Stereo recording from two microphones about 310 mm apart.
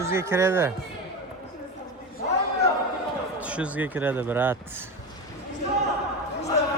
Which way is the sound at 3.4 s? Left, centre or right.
Centre.